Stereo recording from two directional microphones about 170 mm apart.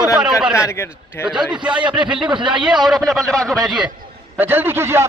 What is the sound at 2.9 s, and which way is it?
Speech, centre (ahead or behind).